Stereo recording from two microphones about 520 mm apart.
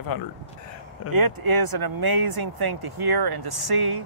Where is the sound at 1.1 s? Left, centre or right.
Right.